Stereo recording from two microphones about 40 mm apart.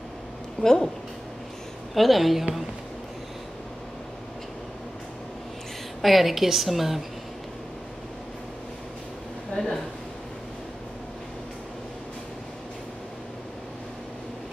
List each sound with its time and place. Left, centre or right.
0.6 s a woman's voice: centre
2.0 s a woman's voice: centre
6.0 s a woman's voice: centre
9.6 s speech: left